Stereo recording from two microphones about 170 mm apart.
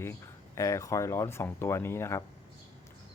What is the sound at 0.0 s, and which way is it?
Speech, 15° left (ahead or behind).